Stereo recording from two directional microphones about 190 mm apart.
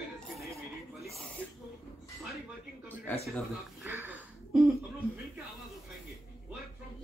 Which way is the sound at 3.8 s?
10° right (ahead or behind).